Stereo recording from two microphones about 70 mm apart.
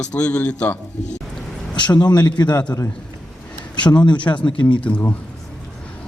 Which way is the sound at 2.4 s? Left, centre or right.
Left.